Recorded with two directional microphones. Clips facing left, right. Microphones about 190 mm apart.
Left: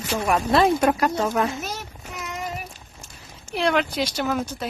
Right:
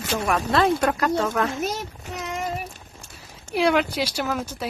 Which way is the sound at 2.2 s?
25° right (ahead or behind).